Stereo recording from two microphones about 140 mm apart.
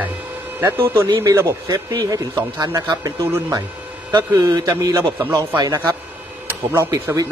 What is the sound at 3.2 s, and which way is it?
Speech, 15° right (ahead or behind).